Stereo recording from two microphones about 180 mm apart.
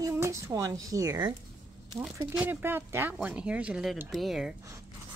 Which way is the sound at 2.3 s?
10° right (ahead or behind).